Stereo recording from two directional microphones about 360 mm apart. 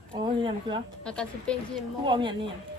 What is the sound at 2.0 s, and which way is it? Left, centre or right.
Speech, centre.